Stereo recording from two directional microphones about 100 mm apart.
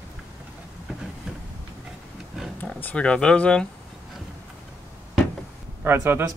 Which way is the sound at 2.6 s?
10° left (ahead or behind).